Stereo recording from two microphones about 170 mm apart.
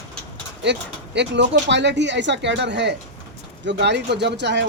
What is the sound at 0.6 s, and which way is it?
Speech, 90° right.